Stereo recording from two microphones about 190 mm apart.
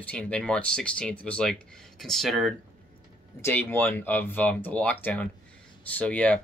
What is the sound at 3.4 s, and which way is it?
Speech, 10° left (ahead or behind).